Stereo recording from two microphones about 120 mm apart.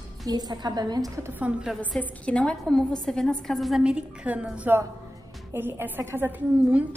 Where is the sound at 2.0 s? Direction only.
10° left (ahead or behind); by 6.8 s 15° right (ahead or behind).